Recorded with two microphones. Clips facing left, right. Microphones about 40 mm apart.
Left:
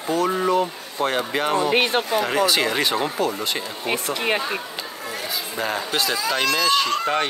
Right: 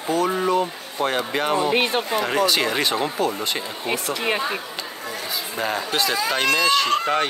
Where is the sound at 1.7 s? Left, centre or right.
Left.